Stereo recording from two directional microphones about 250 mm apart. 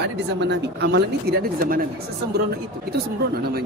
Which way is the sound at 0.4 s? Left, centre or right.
Right.